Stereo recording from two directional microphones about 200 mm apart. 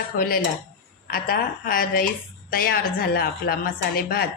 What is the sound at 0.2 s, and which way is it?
A woman's voice, 45° left (ahead or behind).